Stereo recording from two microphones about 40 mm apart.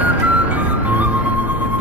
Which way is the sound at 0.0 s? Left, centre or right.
Right.